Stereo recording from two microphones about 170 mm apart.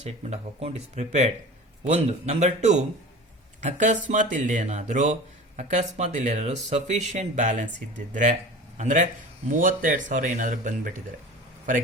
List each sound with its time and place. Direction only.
0.0 s speech: 40° right (ahead or behind)